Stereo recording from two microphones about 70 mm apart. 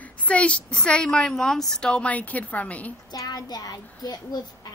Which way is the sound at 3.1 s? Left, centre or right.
Left.